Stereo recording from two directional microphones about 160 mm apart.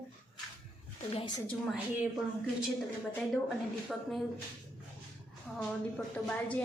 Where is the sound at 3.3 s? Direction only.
Centre (ahead or behind).